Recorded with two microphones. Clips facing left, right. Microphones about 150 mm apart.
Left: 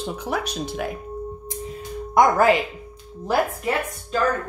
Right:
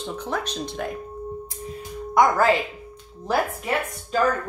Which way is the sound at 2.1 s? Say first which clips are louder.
Left 2 dB; 20° left (ahead or behind).